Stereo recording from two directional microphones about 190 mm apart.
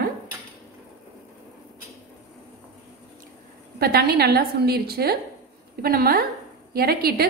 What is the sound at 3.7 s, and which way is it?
A woman's voice, 55° right (ahead or behind).